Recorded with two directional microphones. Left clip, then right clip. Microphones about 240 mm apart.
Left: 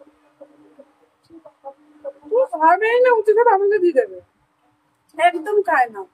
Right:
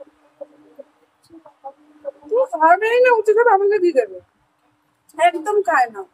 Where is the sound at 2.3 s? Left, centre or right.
Centre.